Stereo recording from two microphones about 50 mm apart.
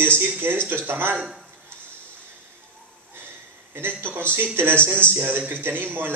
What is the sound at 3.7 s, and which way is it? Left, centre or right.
A man's voice, right.